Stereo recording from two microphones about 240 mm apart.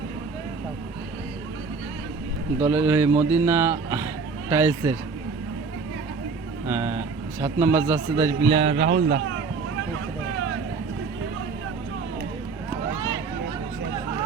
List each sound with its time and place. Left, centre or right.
2.6 s speech: centre
6.7 s a man's voice: centre
8.5 s a man's voice: right
9.0 s speech: right